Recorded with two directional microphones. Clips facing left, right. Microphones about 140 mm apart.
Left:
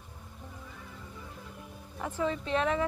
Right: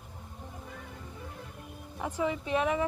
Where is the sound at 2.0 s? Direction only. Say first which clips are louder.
Even; 15° right (ahead or behind).